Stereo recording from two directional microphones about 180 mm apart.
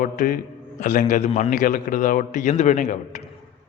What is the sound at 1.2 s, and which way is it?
Speech, 30° left (ahead or behind).